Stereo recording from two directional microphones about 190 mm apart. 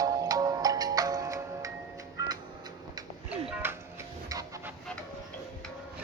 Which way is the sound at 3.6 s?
10° right (ahead or behind).